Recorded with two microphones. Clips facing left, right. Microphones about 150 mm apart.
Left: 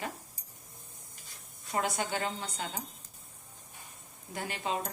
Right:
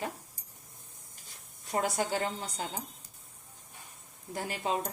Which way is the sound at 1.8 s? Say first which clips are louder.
Right 2 dB; 35° right (ahead or behind).